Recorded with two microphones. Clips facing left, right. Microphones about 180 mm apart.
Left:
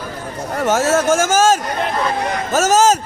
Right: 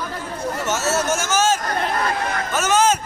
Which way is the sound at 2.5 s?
40° left (ahead or behind).